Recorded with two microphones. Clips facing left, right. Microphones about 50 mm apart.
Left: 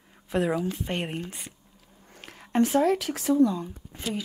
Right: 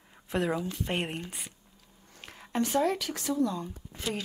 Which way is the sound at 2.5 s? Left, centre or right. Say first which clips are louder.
Left 6 dB; centre.